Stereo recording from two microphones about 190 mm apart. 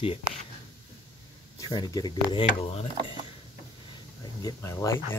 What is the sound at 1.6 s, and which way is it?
Speech, 20° left (ahead or behind).